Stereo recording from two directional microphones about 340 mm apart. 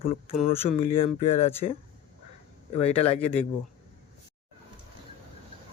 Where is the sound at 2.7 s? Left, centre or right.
Centre.